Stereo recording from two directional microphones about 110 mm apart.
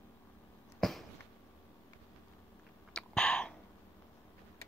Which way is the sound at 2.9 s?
5° left (ahead or behind).